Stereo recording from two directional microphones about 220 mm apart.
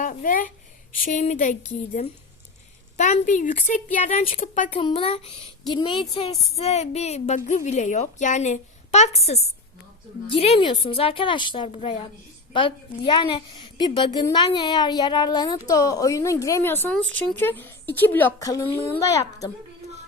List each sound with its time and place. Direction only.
0.0 s a woman's voice: 35° left (ahead or behind)
4.8 s a woman's voice: 25° left (ahead or behind)